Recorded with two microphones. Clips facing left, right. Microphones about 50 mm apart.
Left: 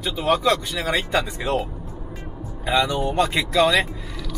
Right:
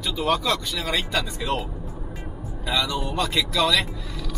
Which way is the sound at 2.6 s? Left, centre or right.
Left.